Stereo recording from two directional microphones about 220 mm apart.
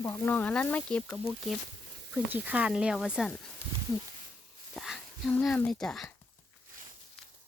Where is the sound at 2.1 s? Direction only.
5° right (ahead or behind).